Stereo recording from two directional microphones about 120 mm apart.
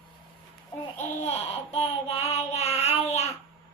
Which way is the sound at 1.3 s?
55° left (ahead or behind).